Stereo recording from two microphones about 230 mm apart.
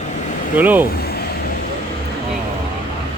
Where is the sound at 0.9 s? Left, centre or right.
Left.